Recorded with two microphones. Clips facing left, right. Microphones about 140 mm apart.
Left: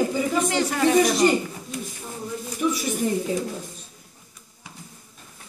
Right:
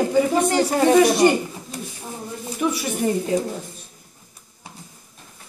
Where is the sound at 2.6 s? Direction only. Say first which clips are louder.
Right 1 dB; 65° right (ahead or behind).